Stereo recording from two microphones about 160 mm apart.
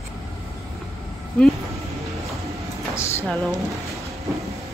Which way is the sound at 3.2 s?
Centre (ahead or behind).